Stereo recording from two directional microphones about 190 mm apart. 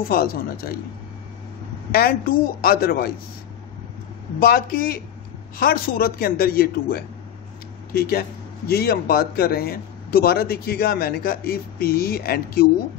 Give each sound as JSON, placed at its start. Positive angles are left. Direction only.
{"t": 0.1, "sound": "a man's voice", "side_deg": 50}
{"t": 1.9, "sound": "a man's voice", "side_deg": 50}
{"t": 4.4, "sound": "a man's voice", "side_deg": 50}